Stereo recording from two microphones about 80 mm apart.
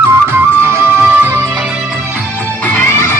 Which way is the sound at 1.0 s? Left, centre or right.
Right.